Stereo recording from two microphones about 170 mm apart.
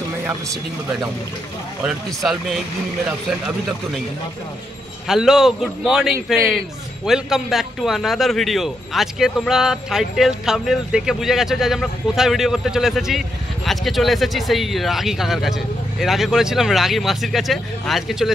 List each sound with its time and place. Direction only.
1.9 s a man's voice: centre (ahead or behind)
5.0 s a man's voice: 5° right (ahead or behind)